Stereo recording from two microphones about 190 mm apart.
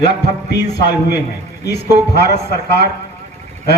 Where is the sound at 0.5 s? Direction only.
60° left (ahead or behind).